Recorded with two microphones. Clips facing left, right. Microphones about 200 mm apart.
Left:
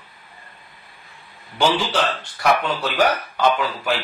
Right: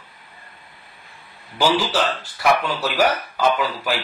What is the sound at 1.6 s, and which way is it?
A man's voice, centre (ahead or behind).